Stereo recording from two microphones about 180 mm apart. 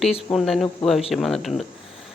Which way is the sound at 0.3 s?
Centre (ahead or behind).